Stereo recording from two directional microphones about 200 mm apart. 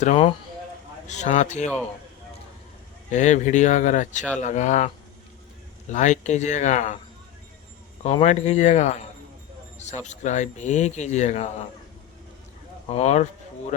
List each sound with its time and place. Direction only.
0.0 s speech: 35° left (ahead or behind)
3.1 s speech: 35° left (ahead or behind)
5.9 s speech: 35° left (ahead or behind)
8.0 s speech: 35° left (ahead or behind)
12.9 s speech: 35° left (ahead or behind)